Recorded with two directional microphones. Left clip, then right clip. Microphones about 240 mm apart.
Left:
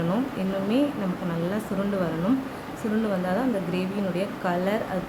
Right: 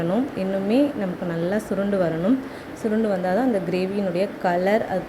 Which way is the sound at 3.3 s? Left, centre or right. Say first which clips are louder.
Right 5 dB; centre.